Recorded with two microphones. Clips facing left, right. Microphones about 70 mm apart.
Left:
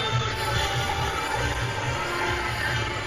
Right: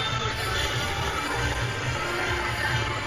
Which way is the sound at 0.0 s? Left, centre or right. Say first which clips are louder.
Left 2 dB; centre.